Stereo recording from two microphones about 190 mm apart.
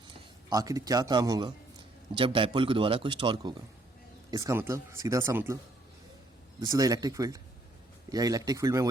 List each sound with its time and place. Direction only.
0.5 s speech: 20° right (ahead or behind)
6.6 s speech: 20° right (ahead or behind)